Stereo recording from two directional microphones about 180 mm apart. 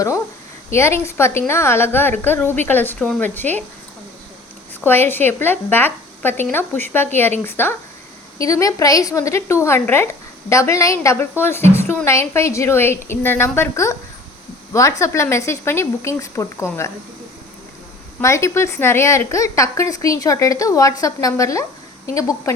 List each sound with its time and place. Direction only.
0.7 s a woman's voice: 15° left (ahead or behind)
4.8 s a woman's voice: 10° left (ahead or behind)
18.2 s a woman's voice: 15° left (ahead or behind)